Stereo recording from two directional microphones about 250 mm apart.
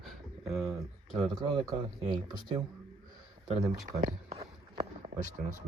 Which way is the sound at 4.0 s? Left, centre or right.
Right.